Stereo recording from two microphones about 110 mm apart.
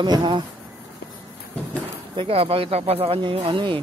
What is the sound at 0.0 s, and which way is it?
Speech, 40° right (ahead or behind).